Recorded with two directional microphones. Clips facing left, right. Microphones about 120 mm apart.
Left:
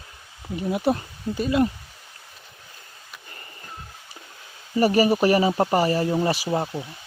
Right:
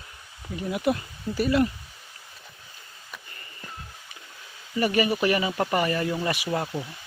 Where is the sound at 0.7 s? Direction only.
30° left (ahead or behind).